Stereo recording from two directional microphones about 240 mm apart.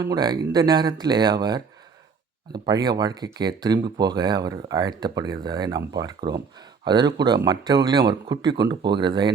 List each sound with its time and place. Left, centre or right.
0.0 s speech: centre